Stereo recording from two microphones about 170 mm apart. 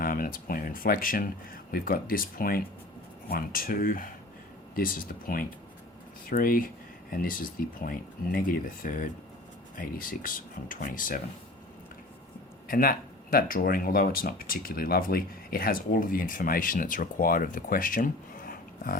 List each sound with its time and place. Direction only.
0.0 s speech: 55° left (ahead or behind)
12.6 s speech: 55° left (ahead or behind)